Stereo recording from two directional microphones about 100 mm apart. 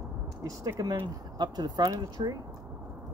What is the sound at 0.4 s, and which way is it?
Speech, 35° right (ahead or behind).